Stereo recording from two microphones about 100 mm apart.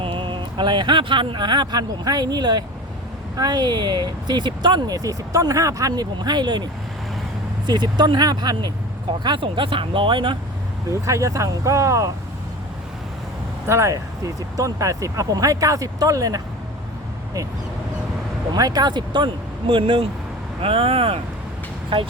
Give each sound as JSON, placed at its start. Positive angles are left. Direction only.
{"t": 0.0, "sound": "speech", "side_deg": -60}
{"t": 7.7, "sound": "speech", "side_deg": -45}
{"t": 9.2, "sound": "speech", "side_deg": -55}
{"t": 10.8, "sound": "speech", "side_deg": -30}
{"t": 13.7, "sound": "speech", "side_deg": -30}
{"t": 18.5, "sound": "speech", "side_deg": -40}